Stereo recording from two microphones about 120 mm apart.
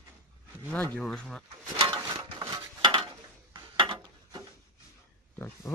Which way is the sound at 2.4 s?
30° right (ahead or behind).